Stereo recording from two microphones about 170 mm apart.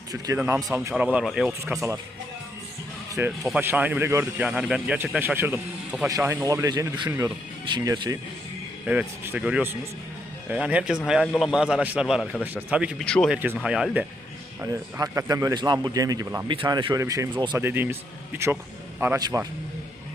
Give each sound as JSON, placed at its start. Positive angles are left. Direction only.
{"t": 0.3, "sound": "a man's voice", "side_deg": -10}
{"t": 3.4, "sound": "a man's voice", "side_deg": -10}
{"t": 8.9, "sound": "a man's voice", "side_deg": -10}
{"t": 13.1, "sound": "a man's voice", "side_deg": 5}
{"t": 13.3, "sound": "a man's voice", "side_deg": -10}
{"t": 14.6, "sound": "a man's voice", "side_deg": -20}
{"t": 18.9, "sound": "a man's voice", "side_deg": -10}